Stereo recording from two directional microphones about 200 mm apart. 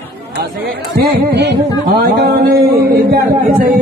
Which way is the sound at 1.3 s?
60° right (ahead or behind).